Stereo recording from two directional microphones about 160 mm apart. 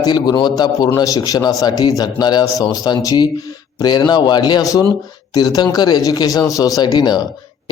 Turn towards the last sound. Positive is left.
turn(degrees=25)  # may be behind; listen again after turning